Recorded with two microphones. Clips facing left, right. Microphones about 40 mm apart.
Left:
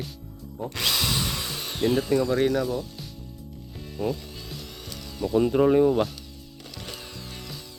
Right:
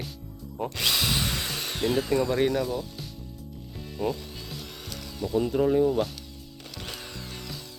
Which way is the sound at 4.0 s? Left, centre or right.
Centre.